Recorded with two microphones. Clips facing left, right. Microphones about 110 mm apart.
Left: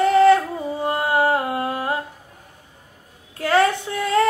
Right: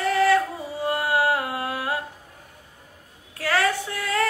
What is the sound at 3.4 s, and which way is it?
Child singing, 20° left (ahead or behind).